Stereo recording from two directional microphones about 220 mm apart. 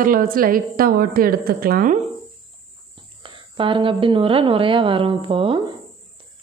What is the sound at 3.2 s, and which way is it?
A woman's voice, 25° right (ahead or behind).